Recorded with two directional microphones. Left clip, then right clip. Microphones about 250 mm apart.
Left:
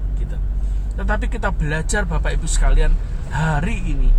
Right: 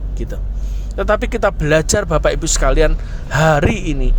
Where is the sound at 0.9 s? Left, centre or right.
Right.